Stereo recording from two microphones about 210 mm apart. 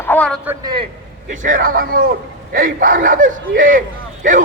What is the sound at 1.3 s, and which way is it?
Speech, 40° right (ahead or behind).